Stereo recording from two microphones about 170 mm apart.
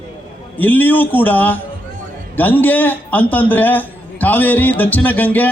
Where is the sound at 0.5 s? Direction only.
10° left (ahead or behind).